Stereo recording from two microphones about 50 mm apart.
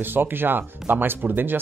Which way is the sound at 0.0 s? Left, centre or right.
Right.